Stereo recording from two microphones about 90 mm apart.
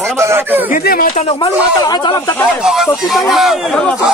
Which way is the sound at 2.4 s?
5° right (ahead or behind).